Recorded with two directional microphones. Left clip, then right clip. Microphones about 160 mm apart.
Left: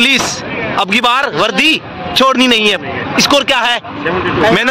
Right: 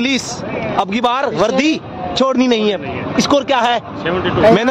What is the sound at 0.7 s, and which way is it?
A man's voice, 10° right (ahead or behind).